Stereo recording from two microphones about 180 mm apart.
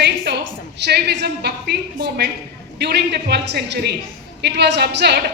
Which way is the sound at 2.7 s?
65° right (ahead or behind).